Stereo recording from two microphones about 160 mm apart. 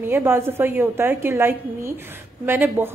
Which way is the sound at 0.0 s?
15° right (ahead or behind).